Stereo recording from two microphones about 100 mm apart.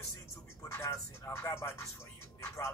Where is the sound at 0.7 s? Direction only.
25° left (ahead or behind).